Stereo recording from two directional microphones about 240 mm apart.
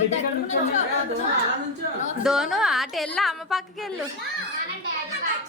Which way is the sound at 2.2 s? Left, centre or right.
Centre.